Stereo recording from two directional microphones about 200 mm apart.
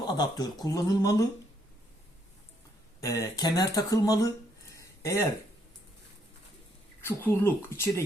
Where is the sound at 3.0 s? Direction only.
15° left (ahead or behind).